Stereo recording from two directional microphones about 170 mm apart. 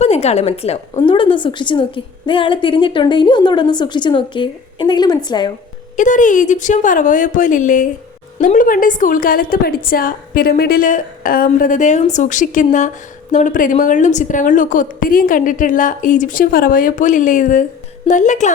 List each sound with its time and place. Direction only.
0.0 s a woman's voice: 40° left (ahead or behind)
6.0 s a woman's voice: 50° left (ahead or behind)